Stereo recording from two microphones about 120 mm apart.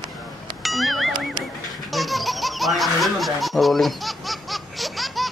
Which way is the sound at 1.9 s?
Centre (ahead or behind).